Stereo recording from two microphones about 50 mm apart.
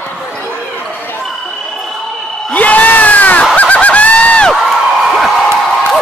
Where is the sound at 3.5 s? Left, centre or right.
Left.